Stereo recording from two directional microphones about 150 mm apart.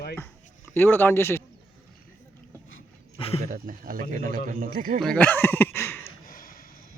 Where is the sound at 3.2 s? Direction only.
40° left (ahead or behind).